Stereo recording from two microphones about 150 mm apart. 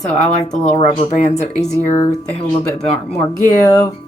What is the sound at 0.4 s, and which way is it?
Speech, 45° left (ahead or behind).